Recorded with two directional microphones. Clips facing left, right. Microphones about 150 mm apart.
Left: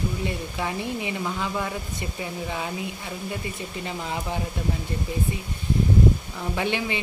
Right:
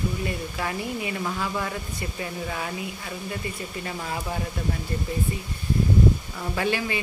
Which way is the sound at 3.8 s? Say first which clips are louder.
Left 1 dB; 20° left (ahead or behind).